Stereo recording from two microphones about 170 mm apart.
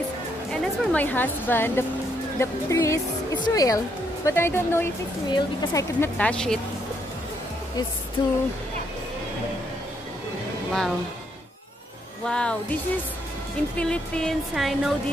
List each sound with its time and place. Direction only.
0.5 s speech: 5° left (ahead or behind)
8.2 s speech: 25° left (ahead or behind)
12.3 s music: 5° left (ahead or behind)
13.7 s music: 5° left (ahead or behind)